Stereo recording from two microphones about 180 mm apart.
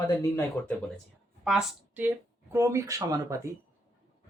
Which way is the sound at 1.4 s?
Centre (ahead or behind).